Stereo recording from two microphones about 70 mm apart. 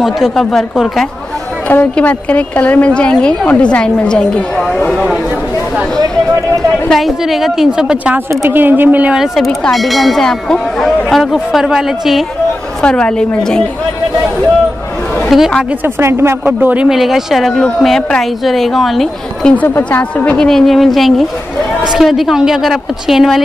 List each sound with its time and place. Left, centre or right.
0.0 s speech: centre
1.7 s a woman's voice: left; by 5.0 s centre
6.9 s speech: centre
8.3 s speech: right
9.1 s speech: centre
12.8 s a woman's voice: centre
15.2 s a sound: centre
15.8 s speech: right
16.8 s speech: centre
19.4 s a woman's voice: centre
20.3 s speech: centre